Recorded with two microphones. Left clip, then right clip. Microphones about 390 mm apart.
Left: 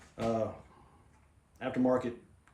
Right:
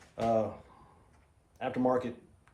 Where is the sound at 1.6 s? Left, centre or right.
Centre.